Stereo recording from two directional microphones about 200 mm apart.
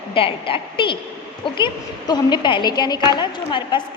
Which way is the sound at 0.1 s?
25° left (ahead or behind).